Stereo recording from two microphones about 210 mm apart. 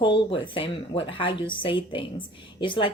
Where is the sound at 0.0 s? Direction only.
25° left (ahead or behind).